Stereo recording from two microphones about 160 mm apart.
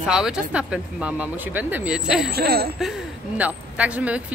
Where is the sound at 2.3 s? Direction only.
75° right (ahead or behind).